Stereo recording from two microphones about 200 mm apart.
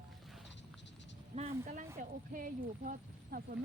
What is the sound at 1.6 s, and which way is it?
Speech, 40° right (ahead or behind).